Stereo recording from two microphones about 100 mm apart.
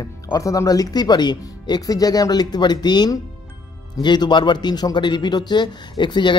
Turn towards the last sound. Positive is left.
turn(degrees=50)  # may be behind; listen again after turning